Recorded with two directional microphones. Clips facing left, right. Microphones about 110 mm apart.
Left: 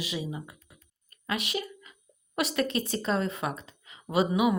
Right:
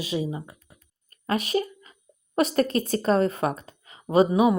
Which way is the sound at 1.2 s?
35° right (ahead or behind).